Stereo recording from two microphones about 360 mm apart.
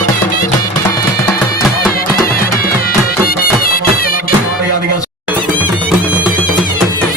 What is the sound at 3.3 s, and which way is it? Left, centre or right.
Music, left.